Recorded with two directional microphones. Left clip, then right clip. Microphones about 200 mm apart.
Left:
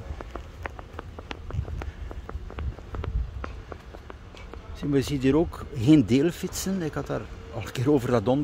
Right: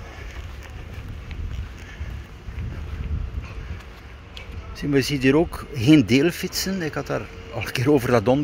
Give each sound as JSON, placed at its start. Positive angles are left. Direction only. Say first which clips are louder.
{"t": 4.7, "sound": "speech", "louder": "right 4 dB", "side_deg": 10}